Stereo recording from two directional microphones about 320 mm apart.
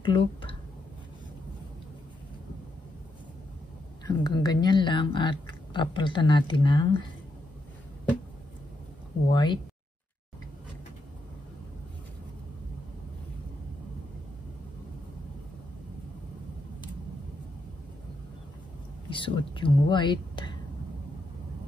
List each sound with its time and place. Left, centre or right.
0.0 s speech: centre
4.0 s speech: centre
9.3 s speech: centre
19.0 s speech: centre